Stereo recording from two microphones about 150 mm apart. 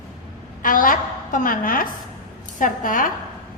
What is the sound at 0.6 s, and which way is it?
A woman's voice, 65° left (ahead or behind).